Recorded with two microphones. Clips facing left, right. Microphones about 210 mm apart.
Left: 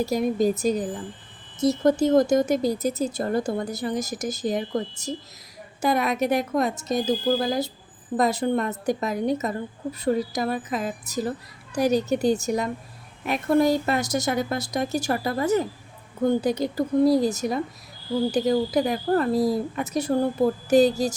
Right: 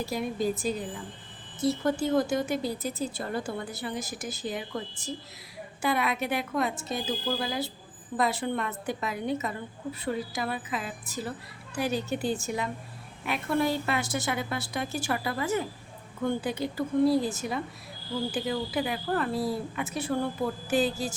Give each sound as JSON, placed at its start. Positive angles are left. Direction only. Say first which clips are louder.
{"t": 0.0, "sound": "a woman's voice", "louder": "left 7 dB", "side_deg": 40}